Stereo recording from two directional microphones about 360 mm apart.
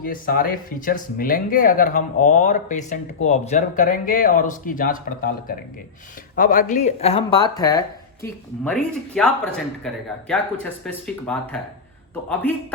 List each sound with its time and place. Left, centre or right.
0.0 s speech: left
8.9 s speech: centre